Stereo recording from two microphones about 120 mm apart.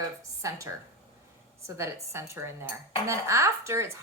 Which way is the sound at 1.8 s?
20° right (ahead or behind).